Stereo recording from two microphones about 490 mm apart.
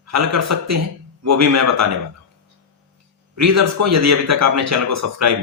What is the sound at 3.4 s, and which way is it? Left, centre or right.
A man's voice, right.